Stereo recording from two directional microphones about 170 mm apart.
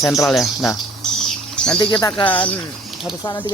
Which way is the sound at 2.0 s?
15° left (ahead or behind).